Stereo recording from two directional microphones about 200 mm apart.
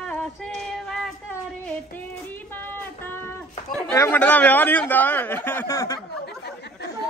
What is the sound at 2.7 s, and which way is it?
Music, 10° left (ahead or behind).